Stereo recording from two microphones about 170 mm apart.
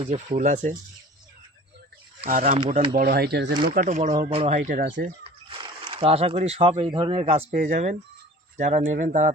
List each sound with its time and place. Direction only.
0.0 s speech: 35° right (ahead or behind)
2.2 s speech: 45° right (ahead or behind)
2.9 s speech: 60° right (ahead or behind); by 3.5 s 80° right
3.8 s speech: 45° right (ahead or behind)
4.1 s speech: 35° right (ahead or behind); by 5.0 s 60° right (ahead or behind)
5.0 s speech: 30° right (ahead or behind)
7.5 s speech: 45° right (ahead or behind)